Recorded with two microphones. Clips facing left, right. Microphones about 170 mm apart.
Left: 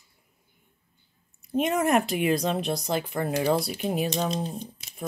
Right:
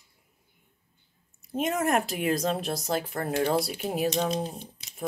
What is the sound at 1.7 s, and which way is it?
Speech, centre (ahead or behind).